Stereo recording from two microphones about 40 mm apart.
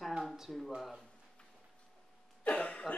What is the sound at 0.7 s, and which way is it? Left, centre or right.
Speech, centre.